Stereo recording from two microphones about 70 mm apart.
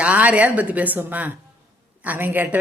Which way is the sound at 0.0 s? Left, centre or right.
Centre.